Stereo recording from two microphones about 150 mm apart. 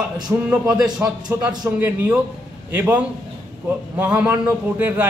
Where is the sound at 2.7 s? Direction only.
10° right (ahead or behind).